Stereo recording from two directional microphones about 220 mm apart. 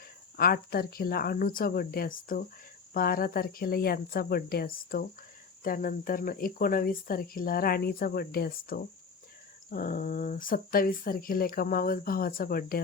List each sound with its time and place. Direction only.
0.3 s speech: 45° left (ahead or behind)